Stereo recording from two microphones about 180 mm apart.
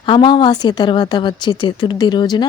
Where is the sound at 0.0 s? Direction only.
25° left (ahead or behind).